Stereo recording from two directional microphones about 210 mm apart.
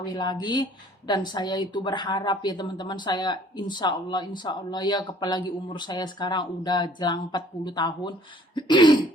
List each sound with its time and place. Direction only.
0.0 s a woman's voice: 20° left (ahead or behind)
8.5 s throat clearing: 20° left (ahead or behind)